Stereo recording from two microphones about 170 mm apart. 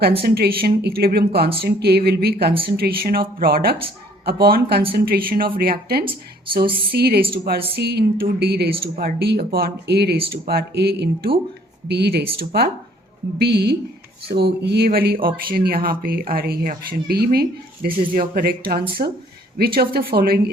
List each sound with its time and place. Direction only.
0.2 s speech: 65° right (ahead or behind)
8.8 s speech: 60° right (ahead or behind)
12.4 s speech: 60° right (ahead or behind)
13.4 s speech: 70° right (ahead or behind)